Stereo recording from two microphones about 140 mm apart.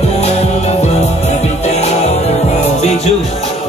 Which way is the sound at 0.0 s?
50° left (ahead or behind).